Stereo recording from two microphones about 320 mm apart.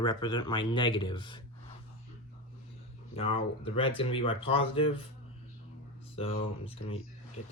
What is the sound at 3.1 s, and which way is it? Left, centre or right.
Speech, centre.